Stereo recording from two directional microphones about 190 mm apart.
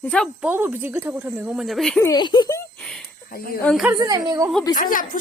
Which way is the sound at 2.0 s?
20° left (ahead or behind).